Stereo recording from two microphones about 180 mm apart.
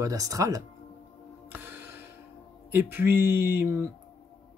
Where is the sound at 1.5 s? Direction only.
10° right (ahead or behind).